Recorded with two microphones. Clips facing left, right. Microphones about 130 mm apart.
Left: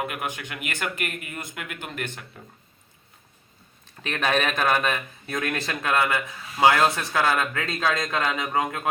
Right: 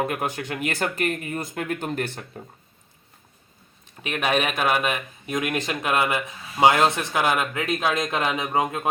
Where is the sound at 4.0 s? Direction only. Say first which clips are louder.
Right 1 dB; 10° right (ahead or behind).